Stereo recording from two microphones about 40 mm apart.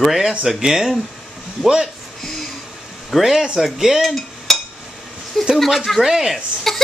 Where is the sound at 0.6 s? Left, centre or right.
Centre.